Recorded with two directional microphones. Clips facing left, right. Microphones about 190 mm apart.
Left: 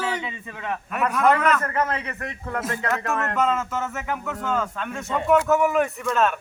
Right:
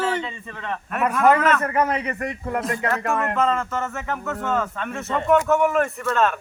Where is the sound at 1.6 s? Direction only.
10° right (ahead or behind).